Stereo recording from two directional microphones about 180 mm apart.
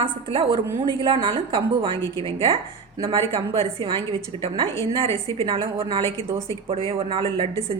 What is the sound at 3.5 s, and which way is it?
A woman's voice, 30° right (ahead or behind).